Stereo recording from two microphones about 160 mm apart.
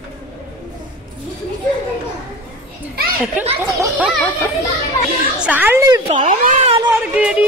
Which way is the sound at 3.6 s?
10° right (ahead or behind).